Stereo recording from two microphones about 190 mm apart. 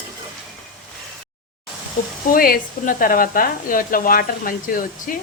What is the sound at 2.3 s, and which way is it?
Speech, 50° left (ahead or behind).